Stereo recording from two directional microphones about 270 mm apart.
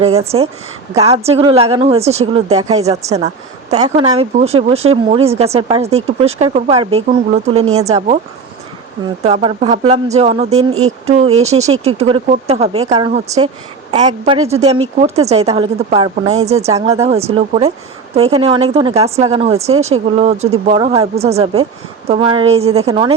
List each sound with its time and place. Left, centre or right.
0.0 s speech: right
7.6 s speech: right
7.9 s speech: right
9.2 s speech: right
10.7 s speech: right
11.3 s speech: right